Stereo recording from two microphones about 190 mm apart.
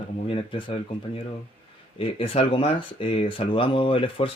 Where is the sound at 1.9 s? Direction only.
30° left (ahead or behind).